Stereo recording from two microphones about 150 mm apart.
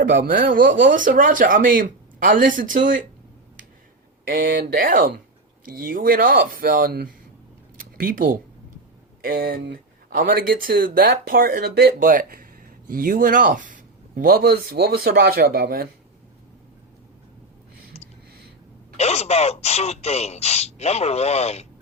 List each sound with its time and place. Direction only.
0.0 s speech: 65° right (ahead or behind)
4.3 s speech: 70° right (ahead or behind)
7.8 s a sound: 80° right
9.2 s speech: 80° right
18.9 s speech: 45° left (ahead or behind)